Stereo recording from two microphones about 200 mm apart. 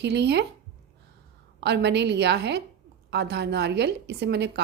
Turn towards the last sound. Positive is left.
turn(degrees=-55)  # may be behind; listen again after turning